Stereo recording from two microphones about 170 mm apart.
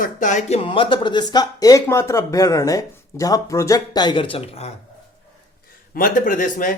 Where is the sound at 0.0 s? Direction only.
45° left (ahead or behind).